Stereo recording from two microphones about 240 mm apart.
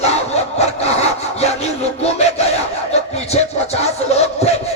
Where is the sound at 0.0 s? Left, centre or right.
Left.